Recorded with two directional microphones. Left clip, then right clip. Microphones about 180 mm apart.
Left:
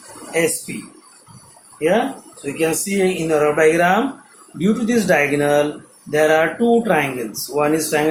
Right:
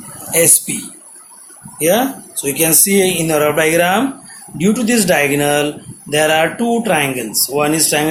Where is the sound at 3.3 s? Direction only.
45° right (ahead or behind).